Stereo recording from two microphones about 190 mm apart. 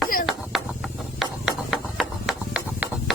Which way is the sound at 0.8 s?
Centre (ahead or behind).